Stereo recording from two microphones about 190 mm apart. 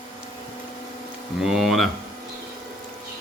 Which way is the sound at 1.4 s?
Centre (ahead or behind).